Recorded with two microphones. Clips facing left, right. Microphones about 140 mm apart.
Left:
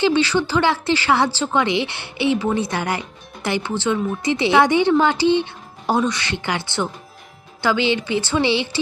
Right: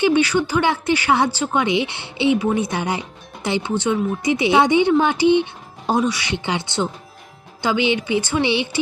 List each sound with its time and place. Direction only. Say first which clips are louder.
0.0 s speech: right 1 dB; 15° right (ahead or behind)